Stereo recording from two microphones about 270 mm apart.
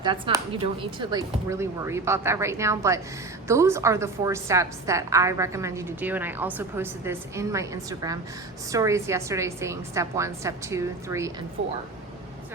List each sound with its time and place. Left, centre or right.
0.0 s a woman's voice: centre
11.6 s speech: right